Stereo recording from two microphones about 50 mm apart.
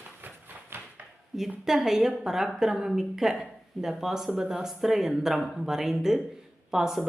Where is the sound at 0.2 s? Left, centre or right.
Right.